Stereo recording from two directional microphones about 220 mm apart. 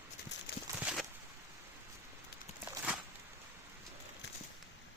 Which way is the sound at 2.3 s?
45° left (ahead or behind).